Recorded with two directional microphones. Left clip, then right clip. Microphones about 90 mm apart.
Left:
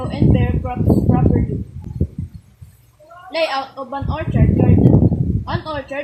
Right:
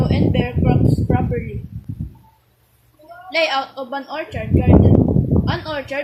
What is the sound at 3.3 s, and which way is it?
Speech, 15° right (ahead or behind).